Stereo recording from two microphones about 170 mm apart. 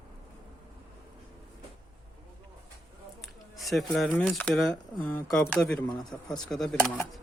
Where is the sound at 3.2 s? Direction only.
Centre (ahead or behind).